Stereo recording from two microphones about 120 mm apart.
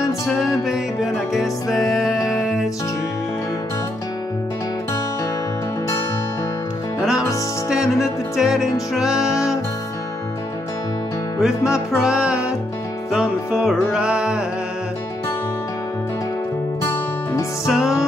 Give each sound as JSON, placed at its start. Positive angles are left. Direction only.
{"t": 1.3, "sound": "music", "side_deg": 0}
{"t": 7.0, "sound": "music", "side_deg": -5}
{"t": 11.3, "sound": "music", "side_deg": -5}
{"t": 16.8, "sound": "music", "side_deg": 20}
{"t": 17.6, "sound": "music", "side_deg": -5}